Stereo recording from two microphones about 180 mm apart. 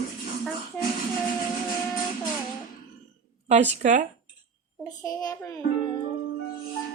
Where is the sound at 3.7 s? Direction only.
40° right (ahead or behind).